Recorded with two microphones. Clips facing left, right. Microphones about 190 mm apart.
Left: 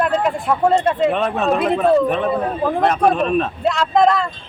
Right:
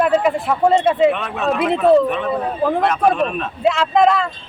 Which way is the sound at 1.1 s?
40° left (ahead or behind).